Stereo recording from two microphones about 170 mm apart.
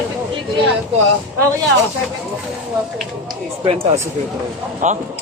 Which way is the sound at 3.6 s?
35° right (ahead or behind).